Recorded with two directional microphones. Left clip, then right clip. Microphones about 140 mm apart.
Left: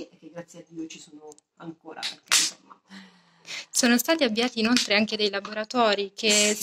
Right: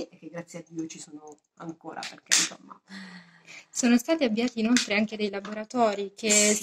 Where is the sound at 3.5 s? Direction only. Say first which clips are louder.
Left 3 dB; 5° right (ahead or behind).